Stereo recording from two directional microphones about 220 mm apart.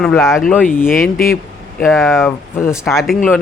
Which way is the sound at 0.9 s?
40° left (ahead or behind).